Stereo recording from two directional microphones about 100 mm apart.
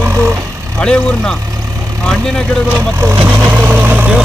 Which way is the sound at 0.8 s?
10° left (ahead or behind).